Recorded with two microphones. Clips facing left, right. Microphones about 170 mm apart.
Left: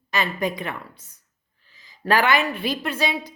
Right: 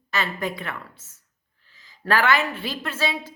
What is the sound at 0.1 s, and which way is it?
A woman's voice, 15° left (ahead or behind).